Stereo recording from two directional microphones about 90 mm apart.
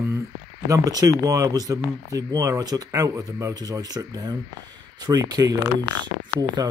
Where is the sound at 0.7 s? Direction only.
40° right (ahead or behind).